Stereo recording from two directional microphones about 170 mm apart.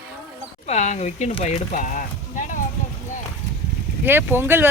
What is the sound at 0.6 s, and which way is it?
Speech, 40° left (ahead or behind).